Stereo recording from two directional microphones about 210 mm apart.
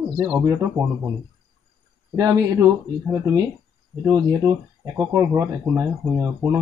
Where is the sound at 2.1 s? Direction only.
15° right (ahead or behind).